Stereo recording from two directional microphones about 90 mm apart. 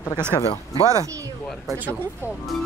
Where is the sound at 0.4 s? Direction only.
90° left.